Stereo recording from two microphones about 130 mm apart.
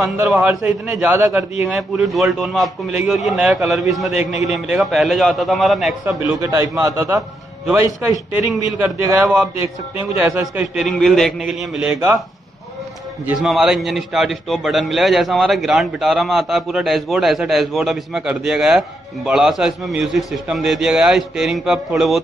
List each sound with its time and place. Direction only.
0.0 s a man's voice: 5° right (ahead or behind)
1.0 s speech: 15° right (ahead or behind)
1.8 s a man's voice: centre (ahead or behind)
6.4 s a man's voice: 25° right (ahead or behind); by 11.9 s centre (ahead or behind)
13.4 s a man's voice: centre (ahead or behind)